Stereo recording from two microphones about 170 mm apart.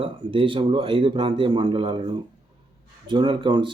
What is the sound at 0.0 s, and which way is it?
A man's voice, 30° right (ahead or behind).